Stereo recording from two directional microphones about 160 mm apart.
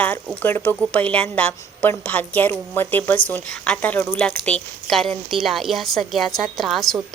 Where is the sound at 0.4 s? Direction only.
10° left (ahead or behind).